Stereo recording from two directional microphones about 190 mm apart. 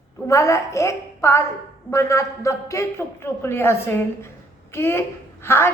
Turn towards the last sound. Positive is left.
turn(degrees=15)  # may be behind; listen again after turning